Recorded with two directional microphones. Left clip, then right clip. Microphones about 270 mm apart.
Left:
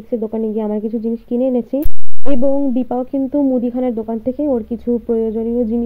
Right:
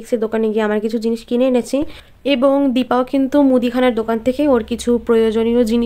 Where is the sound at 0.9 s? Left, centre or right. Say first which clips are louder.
Right 2 dB; centre.